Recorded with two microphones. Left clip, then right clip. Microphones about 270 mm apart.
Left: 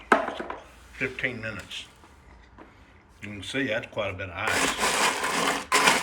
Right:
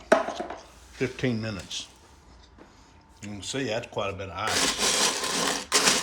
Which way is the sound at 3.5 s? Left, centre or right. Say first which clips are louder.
Left 2 dB; centre.